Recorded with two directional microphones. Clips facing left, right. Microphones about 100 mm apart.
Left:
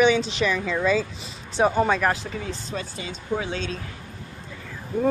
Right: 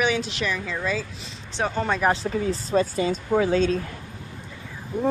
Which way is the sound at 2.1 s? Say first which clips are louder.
Right 4 dB; 35° right (ahead or behind).